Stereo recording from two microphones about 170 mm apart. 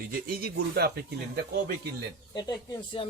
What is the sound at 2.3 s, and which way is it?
Speech, 25° left (ahead or behind).